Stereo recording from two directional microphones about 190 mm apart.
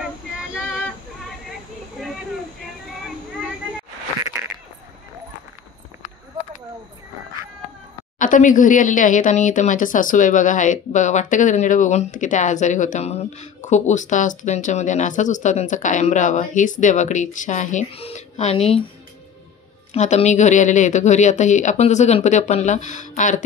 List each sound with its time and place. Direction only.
8.2 s speech: 45° left (ahead or behind)
19.9 s speech: 35° left (ahead or behind)